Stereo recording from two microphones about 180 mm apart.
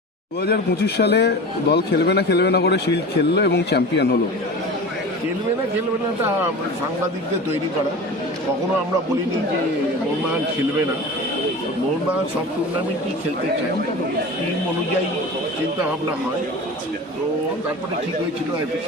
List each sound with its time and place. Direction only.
0.4 s a man's voice: 65° left (ahead or behind)